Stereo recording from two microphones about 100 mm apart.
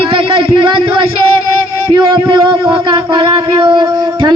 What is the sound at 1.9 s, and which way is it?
Speech, 55° right (ahead or behind).